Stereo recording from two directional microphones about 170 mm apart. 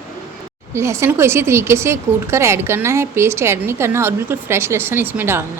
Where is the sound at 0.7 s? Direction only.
15° right (ahead or behind).